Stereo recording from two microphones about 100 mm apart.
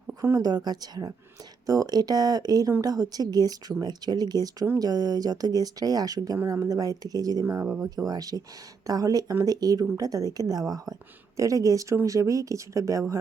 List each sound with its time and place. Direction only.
0.1 s speech: 35° right (ahead or behind)
7.4 s speech: 25° right (ahead or behind)
7.8 s speech: 35° right (ahead or behind)
11.3 s speech: 35° right (ahead or behind)